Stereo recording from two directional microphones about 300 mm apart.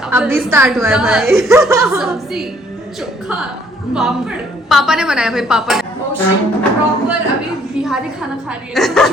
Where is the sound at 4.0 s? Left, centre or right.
Centre.